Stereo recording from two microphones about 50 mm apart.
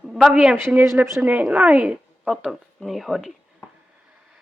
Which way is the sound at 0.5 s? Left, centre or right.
Right.